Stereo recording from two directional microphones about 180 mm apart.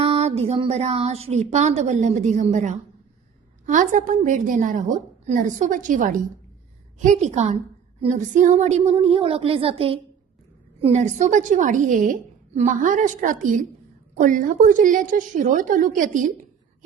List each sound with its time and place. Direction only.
0.0 s a woman's voice: 35° right (ahead or behind)